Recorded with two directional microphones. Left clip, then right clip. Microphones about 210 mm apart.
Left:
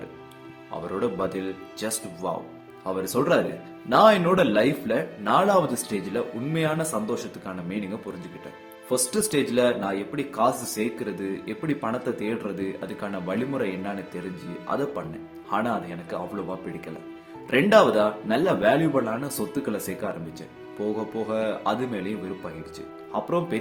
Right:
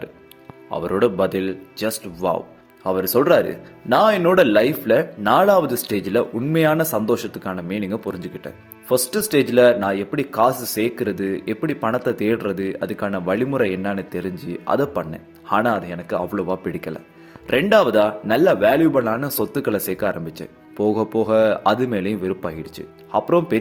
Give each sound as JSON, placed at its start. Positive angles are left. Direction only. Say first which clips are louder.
{"t": 0.7, "sound": "speech", "louder": "right 9 dB", "side_deg": -35}
{"t": 23.1, "sound": "speech", "louder": "right 8 dB", "side_deg": -30}